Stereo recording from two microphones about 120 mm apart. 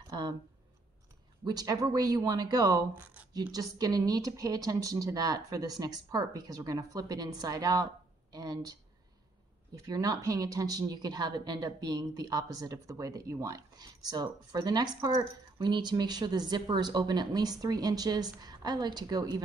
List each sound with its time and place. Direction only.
0.1 s a sound: 35° right (ahead or behind)
1.4 s a woman's voice: 35° right (ahead or behind)
9.8 s a woman's voice: 30° right (ahead or behind)